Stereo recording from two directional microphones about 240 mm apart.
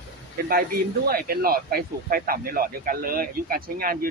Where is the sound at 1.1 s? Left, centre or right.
Right.